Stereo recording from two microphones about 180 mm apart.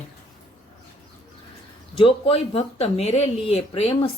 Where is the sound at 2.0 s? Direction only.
30° left (ahead or behind).